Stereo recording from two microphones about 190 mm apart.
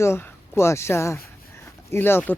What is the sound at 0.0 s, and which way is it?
Speech, 15° left (ahead or behind).